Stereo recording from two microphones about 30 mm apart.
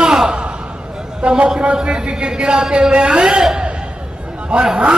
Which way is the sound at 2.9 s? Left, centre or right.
Right.